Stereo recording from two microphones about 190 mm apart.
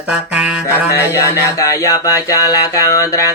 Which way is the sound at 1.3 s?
15° left (ahead or behind).